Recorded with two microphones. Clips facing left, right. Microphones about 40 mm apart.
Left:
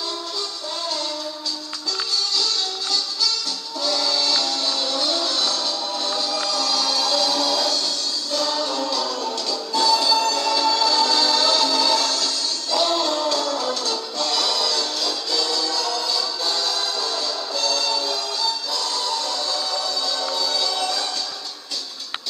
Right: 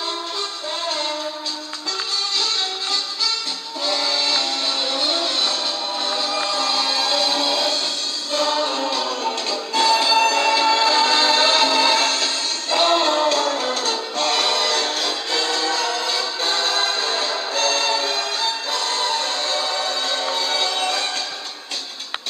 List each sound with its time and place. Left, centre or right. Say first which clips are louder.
2.3 s music: right 1 dB; right